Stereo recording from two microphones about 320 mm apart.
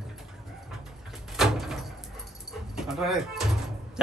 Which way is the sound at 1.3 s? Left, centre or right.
Centre.